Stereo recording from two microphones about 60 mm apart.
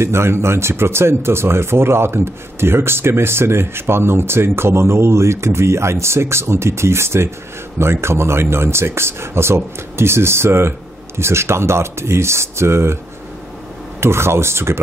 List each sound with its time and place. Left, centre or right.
0.0 s speech: right
14.0 s speech: right